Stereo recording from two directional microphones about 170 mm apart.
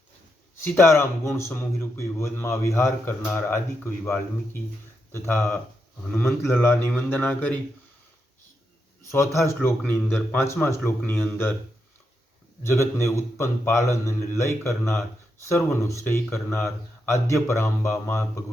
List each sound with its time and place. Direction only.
0.6 s a man's voice: 15° left (ahead or behind)
5.1 s a man's voice: 15° left (ahead or behind)
9.1 s a man's voice: 15° left (ahead or behind)
12.6 s a man's voice: 15° left (ahead or behind)